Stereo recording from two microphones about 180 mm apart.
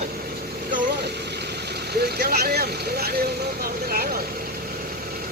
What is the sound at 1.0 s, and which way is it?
Speech, 65° right (ahead or behind).